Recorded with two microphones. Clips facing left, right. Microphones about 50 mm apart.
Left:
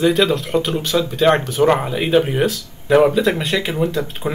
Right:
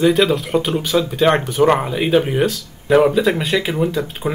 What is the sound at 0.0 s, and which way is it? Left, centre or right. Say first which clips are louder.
Speech: right 1 dB; centre.